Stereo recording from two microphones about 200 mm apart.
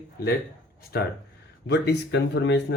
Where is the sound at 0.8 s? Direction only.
50° left (ahead or behind).